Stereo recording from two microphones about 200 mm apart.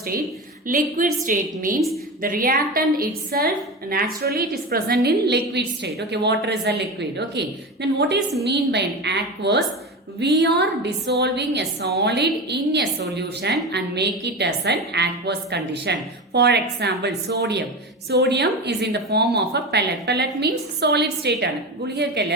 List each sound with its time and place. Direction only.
0.7 s a woman's voice: 40° right (ahead or behind)